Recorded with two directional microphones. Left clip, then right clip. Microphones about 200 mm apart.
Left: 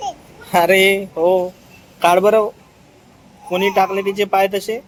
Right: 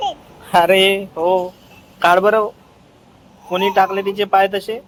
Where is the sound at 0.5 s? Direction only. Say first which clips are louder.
Even; 15° left (ahead or behind).